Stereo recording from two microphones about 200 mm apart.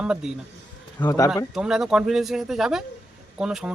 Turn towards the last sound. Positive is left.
turn(degrees=-5)  # may be behind; listen again after turning